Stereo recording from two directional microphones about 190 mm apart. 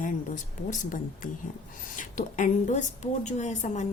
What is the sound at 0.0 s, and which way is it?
A woman's voice, 45° left (ahead or behind).